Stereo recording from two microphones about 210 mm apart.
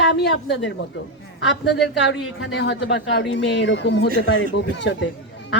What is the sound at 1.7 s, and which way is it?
A woman's voice, 55° left (ahead or behind).